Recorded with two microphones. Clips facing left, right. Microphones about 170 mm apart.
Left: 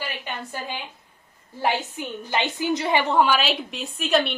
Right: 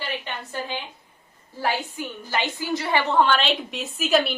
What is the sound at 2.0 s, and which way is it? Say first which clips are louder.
A woman's voice: left 1 dB; 20° left (ahead or behind).